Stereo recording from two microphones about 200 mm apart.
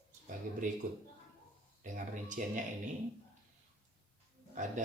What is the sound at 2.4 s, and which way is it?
Speech, 40° right (ahead or behind).